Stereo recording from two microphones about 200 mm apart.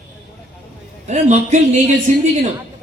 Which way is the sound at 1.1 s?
35° right (ahead or behind).